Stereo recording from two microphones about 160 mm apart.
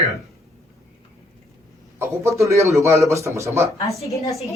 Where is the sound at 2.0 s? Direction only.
20° right (ahead or behind).